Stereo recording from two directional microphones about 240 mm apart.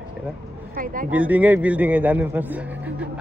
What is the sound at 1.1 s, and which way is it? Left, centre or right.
A man's voice, centre.